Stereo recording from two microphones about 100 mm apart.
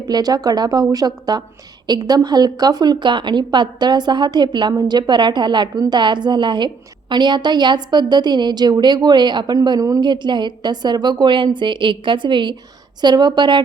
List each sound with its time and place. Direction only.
0.1 s a woman's voice: 40° right (ahead or behind)
9.6 s a woman's voice: 40° right (ahead or behind)
10.0 s a woman's voice: 50° right (ahead or behind)